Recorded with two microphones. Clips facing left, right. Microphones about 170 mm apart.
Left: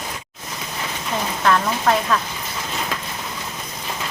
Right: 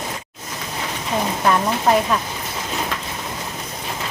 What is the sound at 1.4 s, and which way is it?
Speech, 15° right (ahead or behind).